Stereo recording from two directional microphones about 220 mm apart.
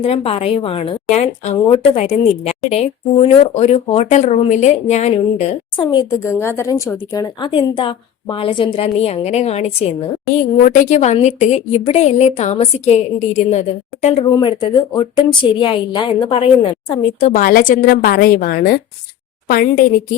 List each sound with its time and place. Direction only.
0.0 s a woman's voice: 25° left (ahead or behind)
14.3 s a woman's voice: 20° left (ahead or behind); by 19.8 s 40° left (ahead or behind)